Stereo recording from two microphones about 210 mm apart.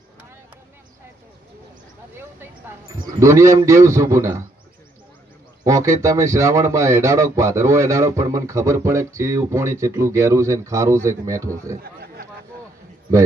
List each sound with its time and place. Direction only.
3.2 s speech: 15° right (ahead or behind)
5.6 s speech: 15° right (ahead or behind)
11.8 s chatter: 45° right (ahead or behind)